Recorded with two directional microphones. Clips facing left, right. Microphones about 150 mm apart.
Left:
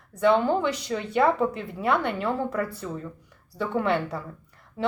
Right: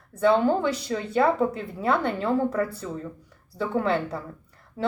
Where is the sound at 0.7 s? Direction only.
35° right (ahead or behind).